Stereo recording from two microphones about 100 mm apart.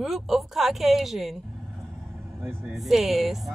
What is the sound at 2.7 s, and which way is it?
Speech, centre (ahead or behind).